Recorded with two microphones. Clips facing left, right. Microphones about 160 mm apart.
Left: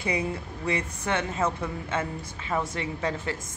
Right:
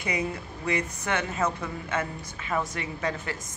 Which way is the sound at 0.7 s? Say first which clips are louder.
Even; 30° left (ahead or behind).